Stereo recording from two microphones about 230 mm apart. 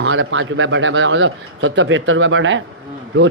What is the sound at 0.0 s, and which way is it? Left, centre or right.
Speech, right.